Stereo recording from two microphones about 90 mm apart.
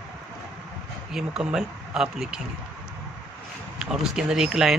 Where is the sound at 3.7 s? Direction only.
5° right (ahead or behind).